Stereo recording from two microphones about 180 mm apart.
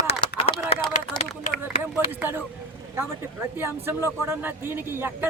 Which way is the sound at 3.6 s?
15° right (ahead or behind).